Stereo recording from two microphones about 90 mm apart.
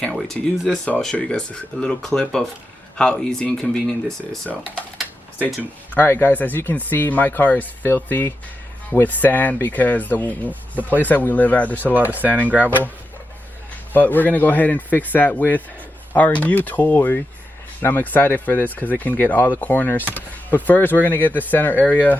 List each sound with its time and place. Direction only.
0.1 s speech: centre (ahead or behind)
0.9 s speech: 15° left (ahead or behind)
5.9 s speech: 20° left (ahead or behind)
10.8 s speech: 20° right (ahead or behind)
11.0 s speech: 20° left (ahead or behind)
12.1 s speech: 20° right (ahead or behind)
13.9 s speech: 20° left (ahead or behind)